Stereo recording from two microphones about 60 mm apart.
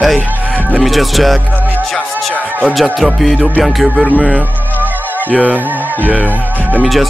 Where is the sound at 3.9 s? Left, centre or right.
Right.